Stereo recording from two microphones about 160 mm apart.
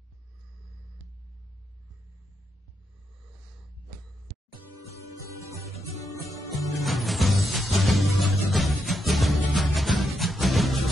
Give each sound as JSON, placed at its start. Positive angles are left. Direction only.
{"t": 5.8, "sound": "music", "side_deg": 20}
{"t": 6.8, "sound": "music", "side_deg": 0}